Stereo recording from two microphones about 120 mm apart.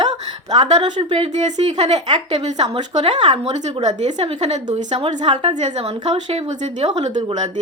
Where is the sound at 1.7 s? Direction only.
65° right (ahead or behind).